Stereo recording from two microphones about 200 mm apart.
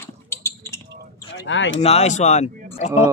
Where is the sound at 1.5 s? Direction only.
70° left (ahead or behind).